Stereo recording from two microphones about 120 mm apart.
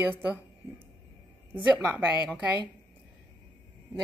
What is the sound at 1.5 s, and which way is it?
Speech, 10° right (ahead or behind).